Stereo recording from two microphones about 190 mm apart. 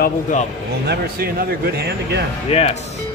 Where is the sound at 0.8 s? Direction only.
55° right (ahead or behind).